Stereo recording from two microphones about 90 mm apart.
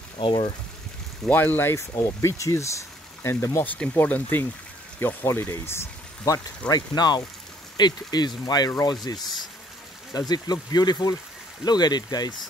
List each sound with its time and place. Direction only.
0.2 s speech: 70° left (ahead or behind)
1.3 s speech: 20° left (ahead or behind)
3.6 s speech: 15° left (ahead or behind); by 6.4 s 35° left (ahead or behind)
6.7 s speech: 50° left (ahead or behind)